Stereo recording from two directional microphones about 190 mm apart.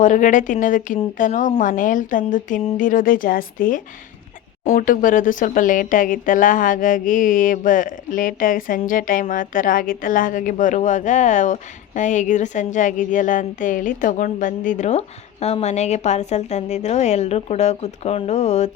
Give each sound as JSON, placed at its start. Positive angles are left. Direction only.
{"t": 0.0, "sound": "speech", "side_deg": 40}